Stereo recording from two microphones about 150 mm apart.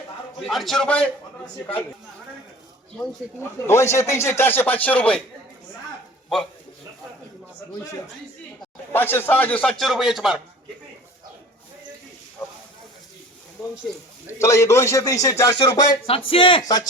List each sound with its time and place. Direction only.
0.4 s a man's voice: centre (ahead or behind)
3.7 s speech: 20° left (ahead or behind)
8.9 s speech: 15° left (ahead or behind); by 10.4 s centre (ahead or behind)
13.6 s a man's voice: centre (ahead or behind)
14.3 s a man's voice: 20° left (ahead or behind)
16.0 s speech: 40° left (ahead or behind)
16.6 s a man's voice: 25° left (ahead or behind)